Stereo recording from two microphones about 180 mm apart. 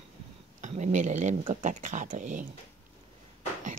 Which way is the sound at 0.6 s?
40° right (ahead or behind).